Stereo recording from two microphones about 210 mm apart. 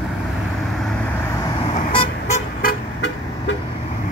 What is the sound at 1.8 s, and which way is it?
Vehicle, 30° left (ahead or behind).